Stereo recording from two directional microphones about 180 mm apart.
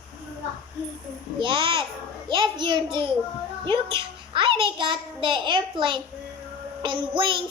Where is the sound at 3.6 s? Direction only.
30° right (ahead or behind).